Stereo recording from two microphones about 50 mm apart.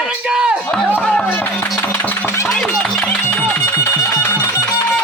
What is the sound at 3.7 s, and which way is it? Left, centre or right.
Music, left.